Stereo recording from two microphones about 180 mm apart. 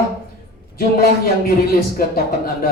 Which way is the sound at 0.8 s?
55° left (ahead or behind).